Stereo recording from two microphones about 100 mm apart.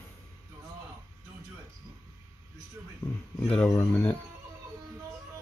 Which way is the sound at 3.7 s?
25° left (ahead or behind).